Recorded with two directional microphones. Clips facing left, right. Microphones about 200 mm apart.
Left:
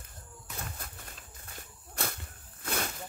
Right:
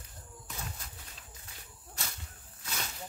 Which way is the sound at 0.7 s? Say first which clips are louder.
Left 4 dB; 55° left (ahead or behind).